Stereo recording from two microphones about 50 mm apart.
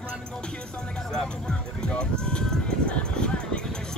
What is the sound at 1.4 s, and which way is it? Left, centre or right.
Music, centre.